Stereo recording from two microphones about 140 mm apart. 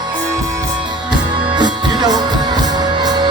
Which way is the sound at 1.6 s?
30° right (ahead or behind).